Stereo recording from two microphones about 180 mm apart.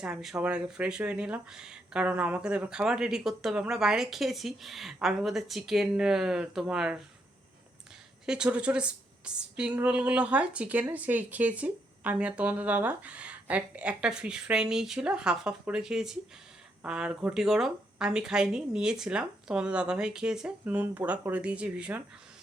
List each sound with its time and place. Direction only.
0.0 s speech: 5° right (ahead or behind)
8.3 s a woman's voice: 5° right (ahead or behind)